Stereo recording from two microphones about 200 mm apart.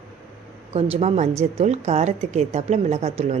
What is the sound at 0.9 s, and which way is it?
Speech, 35° right (ahead or behind).